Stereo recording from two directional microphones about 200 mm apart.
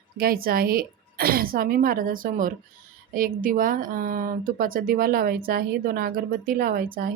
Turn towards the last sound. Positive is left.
turn(degrees=-45)  # may be behind; listen again after turning